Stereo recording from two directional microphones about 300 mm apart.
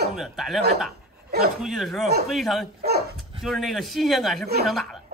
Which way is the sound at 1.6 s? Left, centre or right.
Centre.